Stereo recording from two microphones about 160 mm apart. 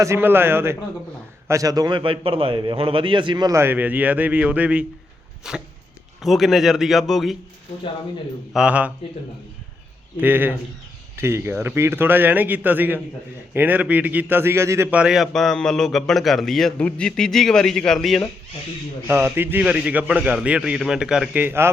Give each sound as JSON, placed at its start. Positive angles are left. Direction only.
{"t": 0.0, "sound": "a man's voice", "side_deg": -15}
{"t": 5.4, "sound": "dog", "side_deg": -5}
{"t": 6.2, "sound": "a man's voice", "side_deg": 0}
{"t": 8.5, "sound": "a man's voice", "side_deg": -10}
{"t": 10.2, "sound": "a man's voice", "side_deg": -10}
{"t": 19.0, "sound": "a man's voice", "side_deg": -15}